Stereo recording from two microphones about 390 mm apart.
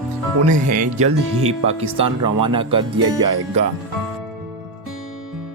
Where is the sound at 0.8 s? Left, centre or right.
Right.